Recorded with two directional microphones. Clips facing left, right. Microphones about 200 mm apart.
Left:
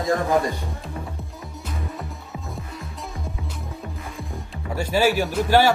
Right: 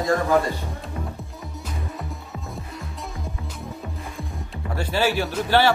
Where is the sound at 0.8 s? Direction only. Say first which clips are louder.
Right 1 dB; centre (ahead or behind).